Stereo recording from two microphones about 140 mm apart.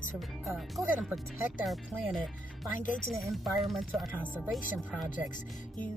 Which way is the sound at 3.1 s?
Centre (ahead or behind).